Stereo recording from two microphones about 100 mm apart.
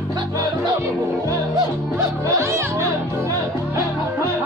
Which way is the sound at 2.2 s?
30° right (ahead or behind).